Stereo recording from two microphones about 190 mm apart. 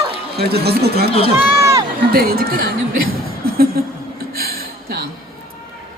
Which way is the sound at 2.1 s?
55° right (ahead or behind).